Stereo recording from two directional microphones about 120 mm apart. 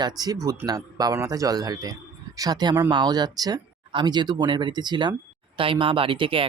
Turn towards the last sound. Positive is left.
turn(degrees=-45)  # may be behind; listen again after turning